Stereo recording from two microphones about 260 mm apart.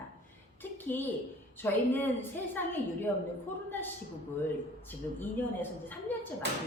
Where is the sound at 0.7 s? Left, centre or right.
Centre.